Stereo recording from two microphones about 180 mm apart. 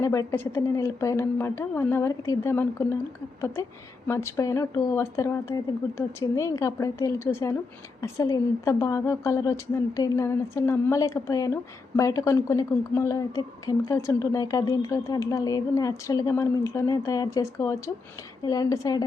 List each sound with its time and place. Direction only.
0.0 s a woman's voice: 15° left (ahead or behind)